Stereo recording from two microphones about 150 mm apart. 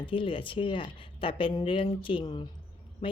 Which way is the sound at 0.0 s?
35° left (ahead or behind).